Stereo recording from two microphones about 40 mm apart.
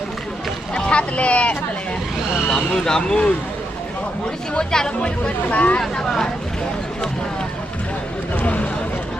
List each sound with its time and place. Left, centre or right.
0.7 s boat: left
2.5 s speech: centre
4.7 s speech: centre
5.0 s speech: left
6.1 s speech: centre
8.4 s a sound: left